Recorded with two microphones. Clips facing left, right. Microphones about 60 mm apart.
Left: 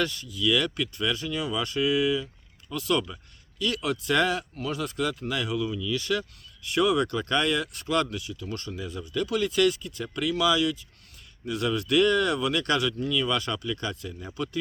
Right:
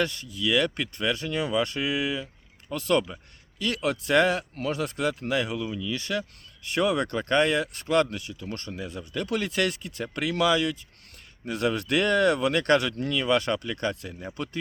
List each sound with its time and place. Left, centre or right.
0.0 s speech: right